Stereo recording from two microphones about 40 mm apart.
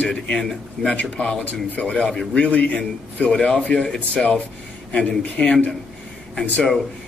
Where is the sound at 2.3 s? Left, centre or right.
Left.